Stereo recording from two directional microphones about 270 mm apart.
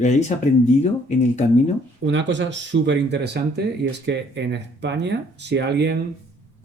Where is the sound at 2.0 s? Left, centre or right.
Right.